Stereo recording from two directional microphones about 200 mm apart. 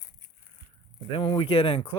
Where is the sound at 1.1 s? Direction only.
25° left (ahead or behind).